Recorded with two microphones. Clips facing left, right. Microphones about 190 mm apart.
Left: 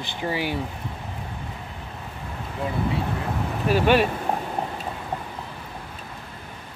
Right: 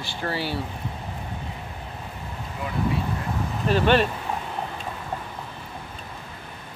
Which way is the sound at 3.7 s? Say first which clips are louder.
Left 1 dB; 10° left (ahead or behind).